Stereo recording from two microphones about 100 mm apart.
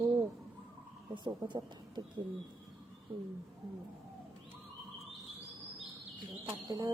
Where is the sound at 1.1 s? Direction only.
50° right (ahead or behind).